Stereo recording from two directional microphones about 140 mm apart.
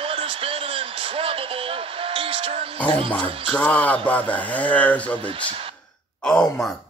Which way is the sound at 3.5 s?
10° left (ahead or behind).